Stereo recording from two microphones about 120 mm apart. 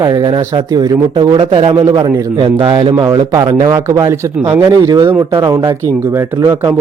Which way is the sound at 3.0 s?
30° right (ahead or behind).